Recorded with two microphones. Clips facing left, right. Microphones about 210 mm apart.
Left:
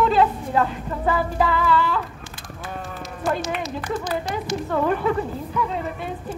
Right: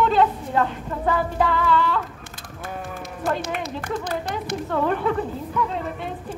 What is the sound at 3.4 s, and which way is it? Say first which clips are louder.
Speech: left 1 dB; 55° right (ahead or behind).